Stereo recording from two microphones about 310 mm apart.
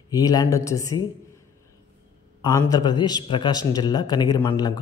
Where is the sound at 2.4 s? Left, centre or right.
Centre.